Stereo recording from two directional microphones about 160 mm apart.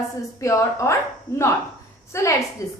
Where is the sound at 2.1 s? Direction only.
15° left (ahead or behind).